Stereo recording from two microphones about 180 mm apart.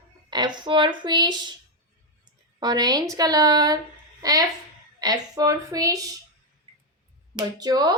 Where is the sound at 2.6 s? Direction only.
20° right (ahead or behind).